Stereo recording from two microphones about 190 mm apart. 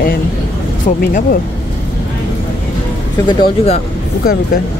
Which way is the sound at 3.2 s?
30° left (ahead or behind).